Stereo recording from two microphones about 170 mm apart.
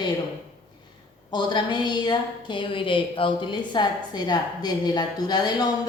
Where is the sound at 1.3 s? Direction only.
25° left (ahead or behind).